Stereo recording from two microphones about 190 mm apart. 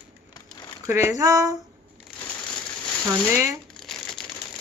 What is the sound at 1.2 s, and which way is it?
Speech, 15° right (ahead or behind).